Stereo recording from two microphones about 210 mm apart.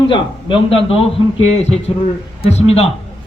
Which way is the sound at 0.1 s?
25° left (ahead or behind).